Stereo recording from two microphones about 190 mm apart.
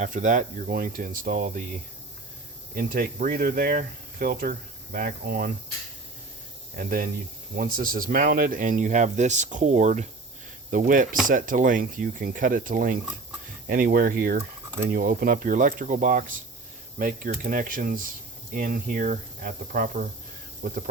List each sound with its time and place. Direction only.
0.0 s speech: 40° right (ahead or behind)
2.7 s speech: 45° right (ahead or behind)
6.7 s speech: 45° right (ahead or behind)